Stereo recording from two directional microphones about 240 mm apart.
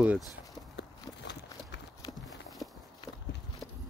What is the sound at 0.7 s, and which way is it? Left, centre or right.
Run, left.